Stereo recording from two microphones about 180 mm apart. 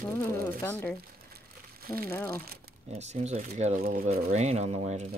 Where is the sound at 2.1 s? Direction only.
15° left (ahead or behind).